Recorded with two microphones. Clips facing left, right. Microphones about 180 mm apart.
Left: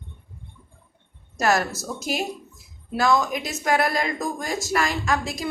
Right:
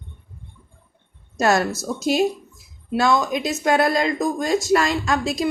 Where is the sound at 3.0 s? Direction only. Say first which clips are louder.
Right 2 dB; 25° right (ahead or behind).